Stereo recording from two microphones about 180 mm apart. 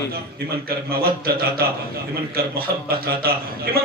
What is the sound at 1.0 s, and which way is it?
Speech, 55° right (ahead or behind).